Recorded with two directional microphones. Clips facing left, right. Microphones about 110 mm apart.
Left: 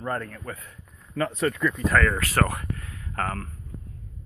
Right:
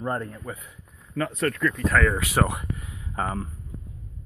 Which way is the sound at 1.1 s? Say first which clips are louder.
Left 1 dB; centre (ahead or behind).